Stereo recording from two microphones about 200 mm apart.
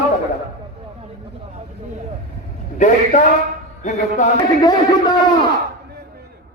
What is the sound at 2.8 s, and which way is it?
Music, 40° left (ahead or behind).